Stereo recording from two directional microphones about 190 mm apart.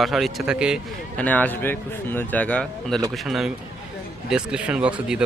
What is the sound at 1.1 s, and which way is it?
A man's voice, 10° left (ahead or behind).